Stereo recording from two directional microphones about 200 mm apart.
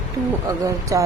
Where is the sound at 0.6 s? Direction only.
15° right (ahead or behind).